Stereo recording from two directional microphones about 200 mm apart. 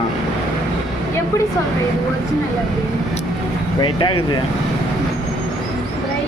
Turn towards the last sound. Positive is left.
turn(degrees=25)  # may be behind; listen again after turning